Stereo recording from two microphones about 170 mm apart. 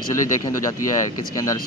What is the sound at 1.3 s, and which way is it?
Speech, 20° left (ahead or behind).